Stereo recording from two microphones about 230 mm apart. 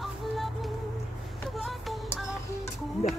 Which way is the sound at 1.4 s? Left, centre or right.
Centre.